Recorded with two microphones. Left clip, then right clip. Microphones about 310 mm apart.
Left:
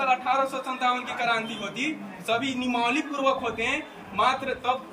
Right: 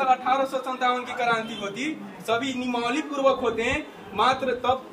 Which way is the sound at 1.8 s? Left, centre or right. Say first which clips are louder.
Left 1 dB; centre.